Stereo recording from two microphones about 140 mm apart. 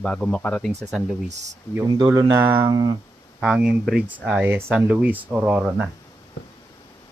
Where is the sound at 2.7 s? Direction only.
30° right (ahead or behind).